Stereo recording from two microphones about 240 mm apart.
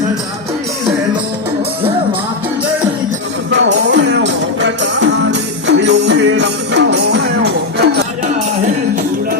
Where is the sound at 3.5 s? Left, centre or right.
Right.